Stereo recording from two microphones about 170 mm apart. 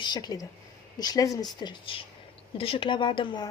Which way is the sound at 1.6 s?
30° left (ahead or behind).